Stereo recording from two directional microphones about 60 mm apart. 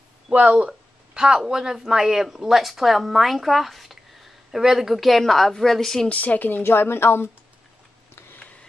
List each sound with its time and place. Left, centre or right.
0.3 s speech: right; by 6.0 s centre
6.0 s speech: left